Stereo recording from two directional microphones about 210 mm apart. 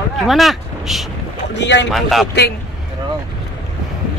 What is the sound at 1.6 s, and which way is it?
Speech, 55° left (ahead or behind).